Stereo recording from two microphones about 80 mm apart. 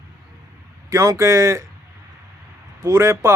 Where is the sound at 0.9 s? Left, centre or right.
Right.